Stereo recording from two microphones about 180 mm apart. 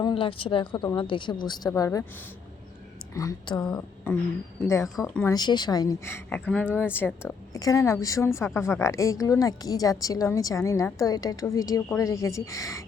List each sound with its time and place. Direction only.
0.0 s a woman's voice: 30° left (ahead or behind)
3.2 s a woman's voice: 20° left (ahead or behind)
3.8 s a woman's voice: 10° left (ahead or behind)
4.9 s speech: centre (ahead or behind)
5.2 s a woman's voice: 20° left (ahead or behind)